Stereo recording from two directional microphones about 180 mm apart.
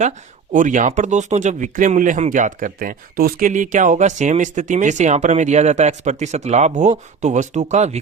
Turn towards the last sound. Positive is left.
turn(degrees=-40)  # may be behind; listen again after turning